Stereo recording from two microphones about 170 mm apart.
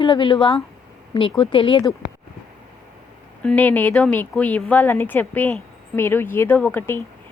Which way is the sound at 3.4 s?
10° left (ahead or behind).